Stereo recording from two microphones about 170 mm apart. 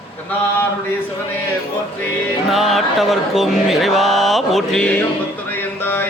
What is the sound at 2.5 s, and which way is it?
Mantra, centre (ahead or behind).